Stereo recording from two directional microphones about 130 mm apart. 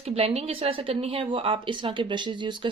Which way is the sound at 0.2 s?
50° right (ahead or behind).